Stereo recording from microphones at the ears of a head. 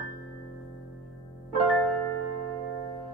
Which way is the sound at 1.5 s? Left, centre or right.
Right.